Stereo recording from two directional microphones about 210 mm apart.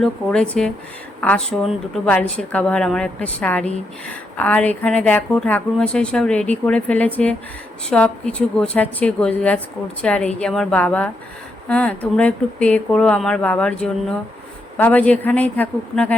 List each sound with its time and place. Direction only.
0.0 s speech: 5° left (ahead or behind)